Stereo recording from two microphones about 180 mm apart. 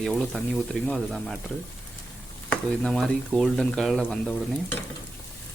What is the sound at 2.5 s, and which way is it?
Speech, 5° left (ahead or behind).